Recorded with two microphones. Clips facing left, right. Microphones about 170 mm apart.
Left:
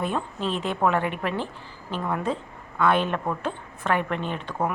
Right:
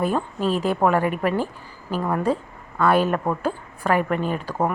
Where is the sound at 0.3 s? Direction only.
5° right (ahead or behind).